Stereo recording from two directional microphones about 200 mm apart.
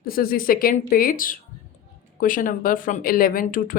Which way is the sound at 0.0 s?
45° left (ahead or behind).